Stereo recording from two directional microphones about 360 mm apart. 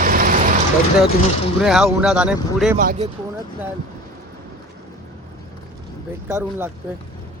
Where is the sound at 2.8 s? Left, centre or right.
Right.